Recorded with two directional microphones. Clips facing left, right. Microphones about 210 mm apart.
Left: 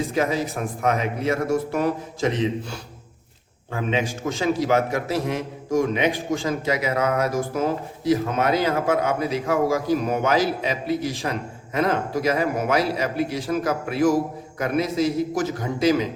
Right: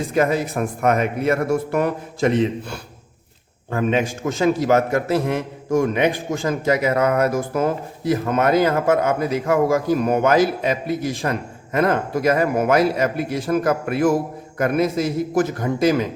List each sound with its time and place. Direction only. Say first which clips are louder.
0.1 s a man's voice: right 4 dB; 55° right (ahead or behind)